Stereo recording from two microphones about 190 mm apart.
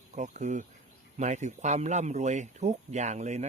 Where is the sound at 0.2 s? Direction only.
40° right (ahead or behind).